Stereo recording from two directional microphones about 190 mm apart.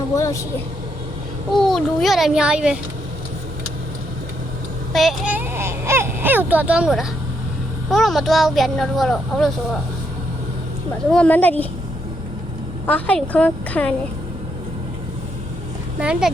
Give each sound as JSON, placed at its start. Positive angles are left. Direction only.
{"t": 0.2, "sound": "a woman's voice", "side_deg": 15}
{"t": 1.5, "sound": "a child's voice", "side_deg": 0}
{"t": 4.9, "sound": "a sound", "side_deg": 0}
{"t": 7.9, "sound": "a child's voice", "side_deg": 0}
{"t": 11.1, "sound": "a woman's voice", "side_deg": 5}
{"t": 12.8, "sound": "a woman's voice", "side_deg": 5}
{"t": 16.0, "sound": "a child's voice", "side_deg": -5}